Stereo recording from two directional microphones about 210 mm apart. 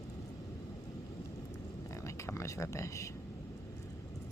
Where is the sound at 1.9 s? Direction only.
15° left (ahead or behind).